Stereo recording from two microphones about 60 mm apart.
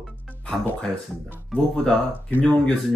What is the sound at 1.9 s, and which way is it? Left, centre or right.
Speech, left.